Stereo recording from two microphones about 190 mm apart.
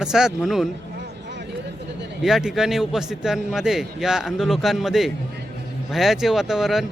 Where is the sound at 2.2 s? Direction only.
Centre (ahead or behind).